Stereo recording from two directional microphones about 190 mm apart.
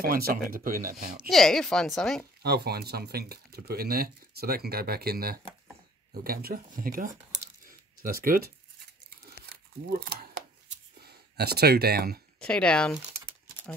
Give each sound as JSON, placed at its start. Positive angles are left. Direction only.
{"t": 0.0, "sound": "speech", "side_deg": -50}
{"t": 1.3, "sound": "a woman's voice", "side_deg": 0}
{"t": 2.4, "sound": "speech", "side_deg": -55}
{"t": 9.5, "sound": "crumpling", "side_deg": -55}
{"t": 11.1, "sound": "speech", "side_deg": -55}
{"t": 12.4, "sound": "a woman's voice", "side_deg": 5}